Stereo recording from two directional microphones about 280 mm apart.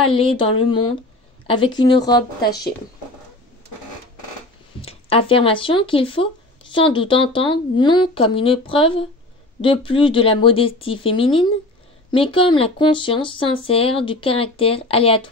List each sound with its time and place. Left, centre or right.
0.1 s speech: centre
4.8 s speech: centre